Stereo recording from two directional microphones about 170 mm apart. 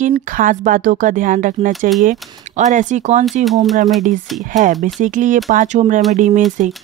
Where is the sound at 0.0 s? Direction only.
50° right (ahead or behind).